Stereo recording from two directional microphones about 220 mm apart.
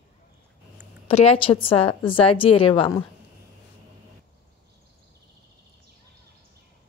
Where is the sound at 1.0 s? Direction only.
25° left (ahead or behind).